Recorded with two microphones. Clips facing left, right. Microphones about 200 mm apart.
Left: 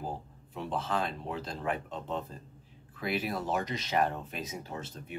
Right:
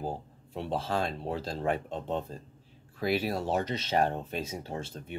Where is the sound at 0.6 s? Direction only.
30° right (ahead or behind).